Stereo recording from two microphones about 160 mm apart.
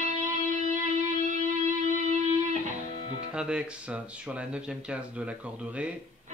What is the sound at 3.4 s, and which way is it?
Speech, 5° right (ahead or behind).